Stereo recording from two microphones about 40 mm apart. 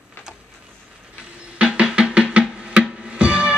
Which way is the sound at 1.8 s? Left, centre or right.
Right.